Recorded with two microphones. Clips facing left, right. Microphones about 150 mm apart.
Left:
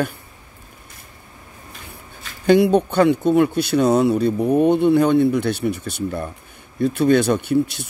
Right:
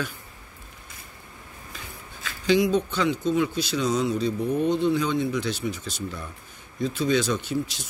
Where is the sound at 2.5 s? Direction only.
60° left (ahead or behind).